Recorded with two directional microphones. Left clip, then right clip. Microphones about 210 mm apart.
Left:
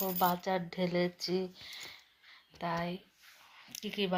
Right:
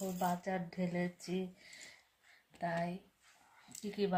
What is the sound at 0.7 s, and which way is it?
Speech, 35° left (ahead or behind).